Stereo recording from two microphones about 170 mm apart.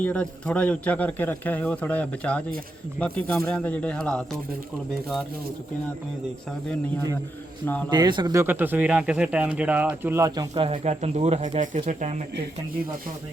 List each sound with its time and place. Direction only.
0.0 s a man's voice: 10° left (ahead or behind)
7.6 s a man's voice: 10° left (ahead or behind)
7.9 s speech: 25° right (ahead or behind)
10.5 s speech: 35° right (ahead or behind)